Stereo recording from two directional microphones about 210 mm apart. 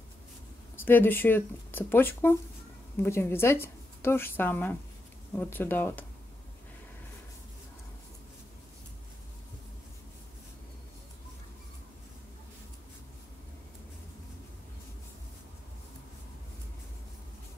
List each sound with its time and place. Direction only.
0.7 s speech: 10° left (ahead or behind)